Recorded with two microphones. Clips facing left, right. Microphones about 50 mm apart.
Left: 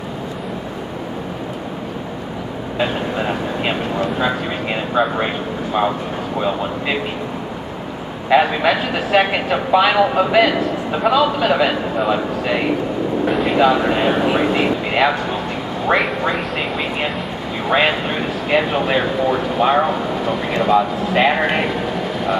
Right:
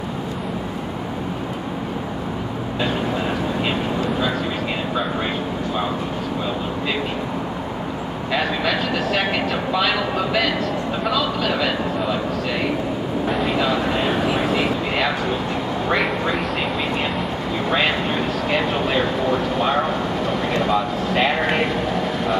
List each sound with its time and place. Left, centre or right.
2.8 s vehicle: centre
4.9 s speech: left
8.3 s speech: left
13.3 s speech: centre
13.6 s speech: centre
17.6 s speech: centre